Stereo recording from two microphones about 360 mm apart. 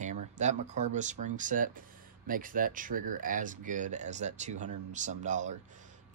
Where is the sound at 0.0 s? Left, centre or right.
Centre.